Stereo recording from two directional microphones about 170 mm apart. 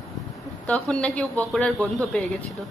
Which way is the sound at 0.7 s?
5° left (ahead or behind).